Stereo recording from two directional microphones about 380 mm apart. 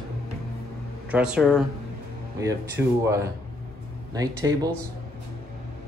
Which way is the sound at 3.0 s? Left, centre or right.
Centre.